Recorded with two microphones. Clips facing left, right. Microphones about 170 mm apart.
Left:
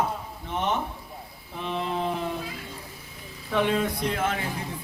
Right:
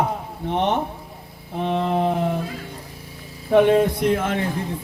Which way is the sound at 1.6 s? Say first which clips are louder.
Right 8 dB; 60° right (ahead or behind).